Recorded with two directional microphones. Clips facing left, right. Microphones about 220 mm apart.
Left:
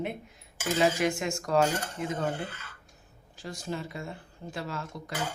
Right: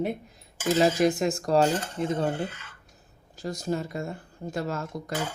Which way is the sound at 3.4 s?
40° right (ahead or behind).